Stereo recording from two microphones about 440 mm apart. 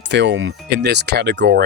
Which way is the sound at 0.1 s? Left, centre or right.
Right.